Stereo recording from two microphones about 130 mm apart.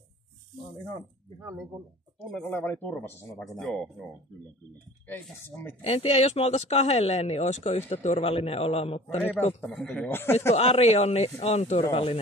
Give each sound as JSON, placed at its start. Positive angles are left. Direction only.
{"t": 1.4, "sound": "speech", "side_deg": -20}
{"t": 2.3, "sound": "speech", "side_deg": 10}
{"t": 3.4, "sound": "speech", "side_deg": 5}
{"t": 5.0, "sound": "speech", "side_deg": 15}
{"t": 5.8, "sound": "speech", "side_deg": 50}
{"t": 8.3, "sound": "a man's voice", "side_deg": 50}
{"t": 9.6, "sound": "speech", "side_deg": 5}
{"t": 10.5, "sound": "speech", "side_deg": 55}
{"t": 11.9, "sound": "a man's voice", "side_deg": 45}